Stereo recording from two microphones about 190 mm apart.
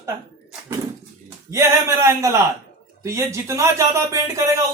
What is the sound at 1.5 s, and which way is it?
Speech, 15° right (ahead or behind).